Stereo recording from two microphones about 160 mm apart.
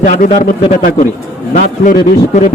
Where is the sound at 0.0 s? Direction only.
55° left (ahead or behind).